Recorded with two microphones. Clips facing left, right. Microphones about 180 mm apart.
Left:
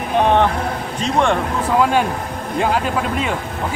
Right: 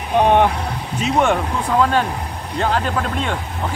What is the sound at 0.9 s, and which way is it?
Speech, 5° right (ahead or behind).